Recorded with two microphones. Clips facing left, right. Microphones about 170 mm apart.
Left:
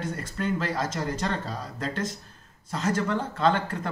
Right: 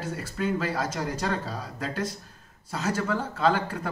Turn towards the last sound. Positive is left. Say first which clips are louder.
# even
turn(degrees=-10)  # may be behind; listen again after turning